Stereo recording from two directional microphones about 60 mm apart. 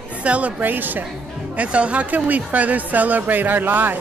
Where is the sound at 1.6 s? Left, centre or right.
Right.